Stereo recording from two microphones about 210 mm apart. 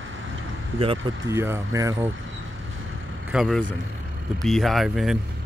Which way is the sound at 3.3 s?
Centre (ahead or behind).